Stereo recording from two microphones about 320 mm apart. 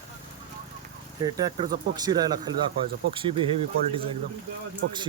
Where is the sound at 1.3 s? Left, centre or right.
Centre.